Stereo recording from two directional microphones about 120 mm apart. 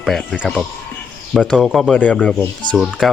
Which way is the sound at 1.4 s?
5° left (ahead or behind).